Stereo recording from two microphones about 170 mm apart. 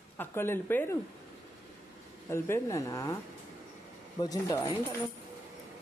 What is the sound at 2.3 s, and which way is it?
Speech, 15° left (ahead or behind).